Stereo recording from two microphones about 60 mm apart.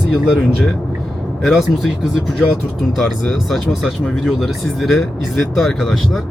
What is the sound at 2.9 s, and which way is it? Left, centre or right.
Speech, centre.